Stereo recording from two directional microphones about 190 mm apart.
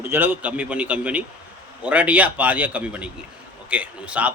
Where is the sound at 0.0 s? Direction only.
10° right (ahead or behind).